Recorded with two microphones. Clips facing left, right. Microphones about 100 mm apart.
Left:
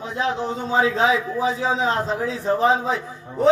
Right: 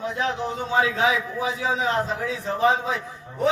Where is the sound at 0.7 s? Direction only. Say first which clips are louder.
Left 3 dB; 25° left (ahead or behind).